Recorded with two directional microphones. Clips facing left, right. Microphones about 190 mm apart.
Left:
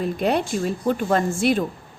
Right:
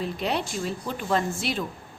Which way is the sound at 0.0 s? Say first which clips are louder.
Left 6 dB; 50° left (ahead or behind).